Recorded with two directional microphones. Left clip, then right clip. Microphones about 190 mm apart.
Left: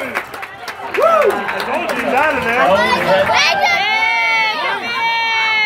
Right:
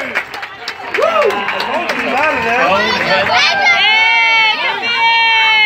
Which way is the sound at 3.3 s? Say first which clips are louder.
Right 2 dB; 50° left (ahead or behind).